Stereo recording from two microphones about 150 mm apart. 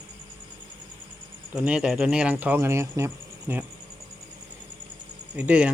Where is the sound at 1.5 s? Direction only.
5° right (ahead or behind).